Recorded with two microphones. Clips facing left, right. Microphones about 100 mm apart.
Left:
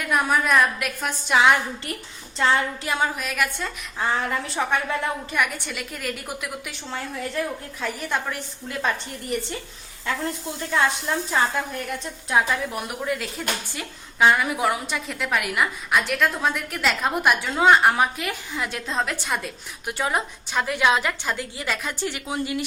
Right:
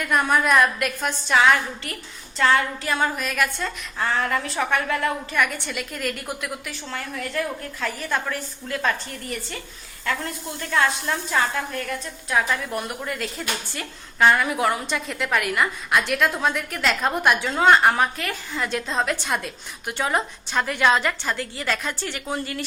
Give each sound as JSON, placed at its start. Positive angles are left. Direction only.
{"t": 0.0, "sound": "a woman's voice", "side_deg": 5}
{"t": 1.4, "sound": "a woman's voice", "side_deg": 20}
{"t": 6.7, "sound": "a woman's voice", "side_deg": 20}
{"t": 10.1, "sound": "a woman's voice", "side_deg": 25}
{"t": 12.7, "sound": "a woman's voice", "side_deg": 5}